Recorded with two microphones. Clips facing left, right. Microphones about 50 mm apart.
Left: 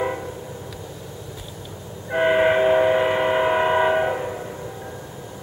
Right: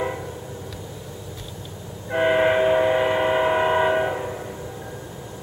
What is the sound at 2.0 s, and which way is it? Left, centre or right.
Train, centre.